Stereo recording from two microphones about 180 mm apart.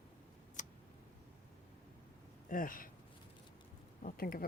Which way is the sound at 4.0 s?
55° left (ahead or behind).